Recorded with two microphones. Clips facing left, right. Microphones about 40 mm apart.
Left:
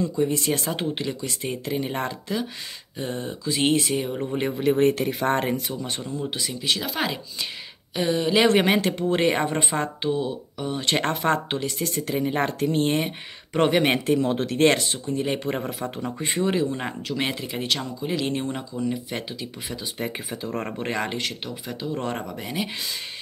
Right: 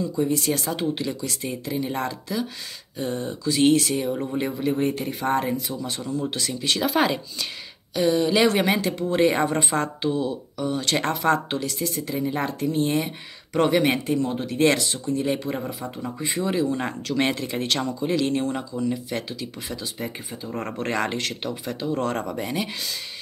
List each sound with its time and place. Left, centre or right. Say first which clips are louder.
0.2 s speech: right 2 dB; left
4.1 s speech: right 1 dB; centre
4.6 s speech: left 6 dB; left
6.3 s speech: right 1 dB; centre
7.9 s speech: right 3 dB; left
8.4 s speech: left 1 dB; left
11.8 s speech: left 1 dB; left
14.0 s speech: left 2 dB; left
14.6 s speech: even; left
17.1 s speech: right 4 dB; centre
18.2 s speech: right 3 dB; centre
20.6 s speech: right 1 dB; left
20.9 s speech: right 3 dB; centre
22.2 s speech: right 2 dB; centre